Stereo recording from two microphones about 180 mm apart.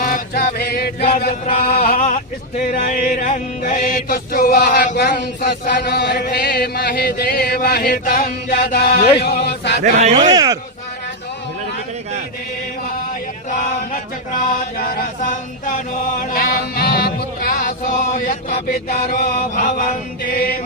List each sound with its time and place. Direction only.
0.0 s music: 50° left (ahead or behind)
1.5 s a sound: 55° left (ahead or behind)
2.7 s chant: 45° left (ahead or behind); by 9.8 s 70° left (ahead or behind)
9.8 s speech: 40° right (ahead or behind)
10.3 s speech: 20° right (ahead or behind)
13.5 s a sound: 45° left (ahead or behind)
14.8 s chant: 55° left (ahead or behind)
16.3 s music: 55° left (ahead or behind)
20.3 s chant: 55° left (ahead or behind)